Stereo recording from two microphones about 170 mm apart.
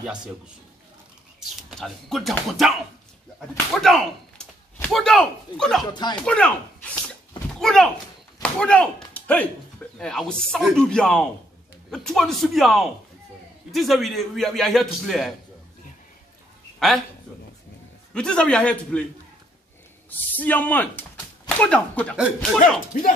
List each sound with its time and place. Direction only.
1.7 s a man's voice: centre (ahead or behind)
16.8 s a man's voice: centre (ahead or behind)
18.1 s a man's voice: 5° left (ahead or behind)
20.1 s a man's voice: 10° left (ahead or behind)
22.1 s a man's voice: 5° right (ahead or behind)
22.9 s speech: 50° left (ahead or behind)